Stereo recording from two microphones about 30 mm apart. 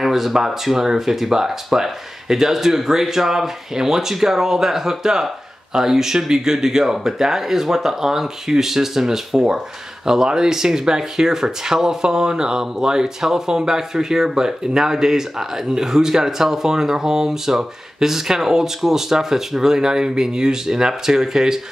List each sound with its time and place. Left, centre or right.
0.0 s speech: centre